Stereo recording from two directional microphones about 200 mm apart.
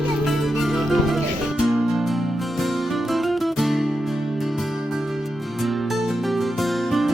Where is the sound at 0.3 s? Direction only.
Centre (ahead or behind).